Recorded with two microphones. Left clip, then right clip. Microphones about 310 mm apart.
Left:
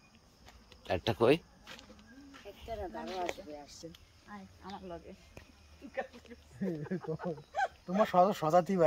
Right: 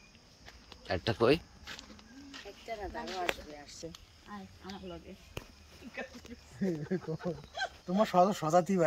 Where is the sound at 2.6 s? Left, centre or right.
Left.